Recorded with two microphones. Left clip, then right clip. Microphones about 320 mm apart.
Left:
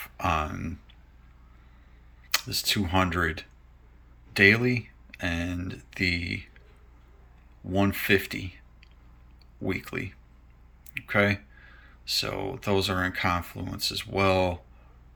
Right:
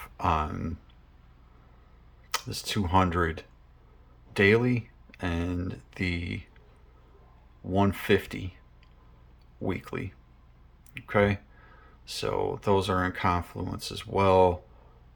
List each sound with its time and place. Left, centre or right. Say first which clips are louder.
0.0 s a sound: even; centre
2.3 s speech: left 5 dB; centre
7.7 s speech: left 1 dB; centre